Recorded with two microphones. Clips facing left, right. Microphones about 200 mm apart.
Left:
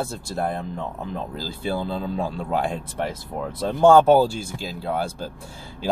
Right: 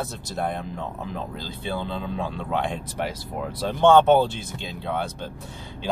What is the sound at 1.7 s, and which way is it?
Speech, 35° left (ahead or behind).